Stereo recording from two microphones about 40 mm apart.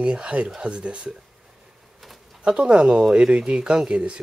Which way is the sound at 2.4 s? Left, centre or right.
Right.